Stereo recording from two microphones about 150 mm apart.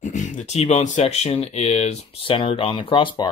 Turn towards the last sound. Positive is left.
turn(degrees=35)  # may be behind; listen again after turning